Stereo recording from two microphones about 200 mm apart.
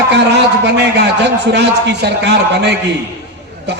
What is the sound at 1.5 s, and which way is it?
A man's voice, 60° right (ahead or behind).